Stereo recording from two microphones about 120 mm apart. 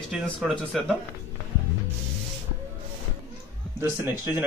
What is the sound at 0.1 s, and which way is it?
Speech, centre (ahead or behind).